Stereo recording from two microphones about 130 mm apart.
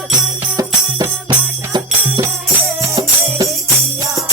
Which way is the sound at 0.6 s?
30° right (ahead or behind).